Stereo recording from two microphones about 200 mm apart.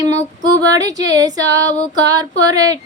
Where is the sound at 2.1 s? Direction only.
20° right (ahead or behind).